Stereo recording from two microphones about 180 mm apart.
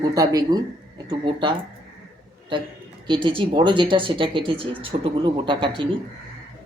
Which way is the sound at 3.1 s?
30° right (ahead or behind).